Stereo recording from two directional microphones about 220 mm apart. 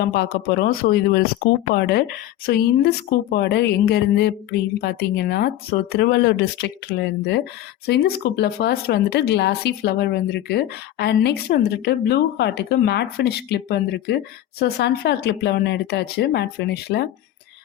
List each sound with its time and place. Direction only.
0.0 s a woman's voice: 45° left (ahead or behind)